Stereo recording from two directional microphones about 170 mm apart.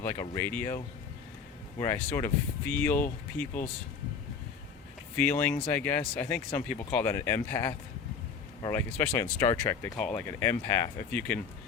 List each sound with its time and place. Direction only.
0.0 s speech: 15° left (ahead or behind)
1.8 s speech: 15° left (ahead or behind)
5.1 s speech: 10° left (ahead or behind)